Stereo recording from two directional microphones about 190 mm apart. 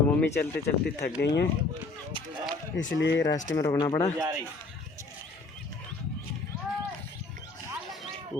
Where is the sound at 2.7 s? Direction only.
70° left (ahead or behind).